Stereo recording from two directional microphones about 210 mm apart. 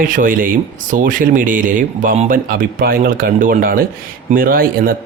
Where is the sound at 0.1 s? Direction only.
40° right (ahead or behind).